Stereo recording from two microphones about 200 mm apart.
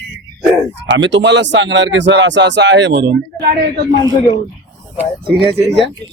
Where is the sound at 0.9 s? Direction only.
65° right (ahead or behind).